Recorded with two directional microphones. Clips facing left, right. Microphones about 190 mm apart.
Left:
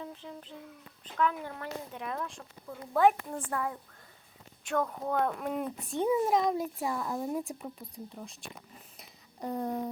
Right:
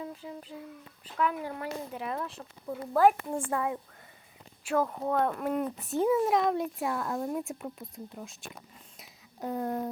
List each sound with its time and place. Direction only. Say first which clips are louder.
0.0 s a child's voice: right 3 dB; 5° right (ahead or behind)
3.3 s a child's voice: right 4 dB; 20° right (ahead or behind)
4.6 s a child's voice: right 3 dB; 5° right (ahead or behind)
9.0 s a sound: right 2 dB; centre (ahead or behind)